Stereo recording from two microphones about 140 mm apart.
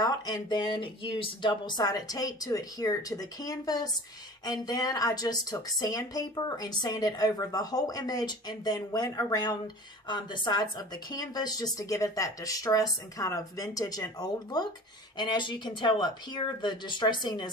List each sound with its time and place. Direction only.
0.0 s speech: 30° left (ahead or behind)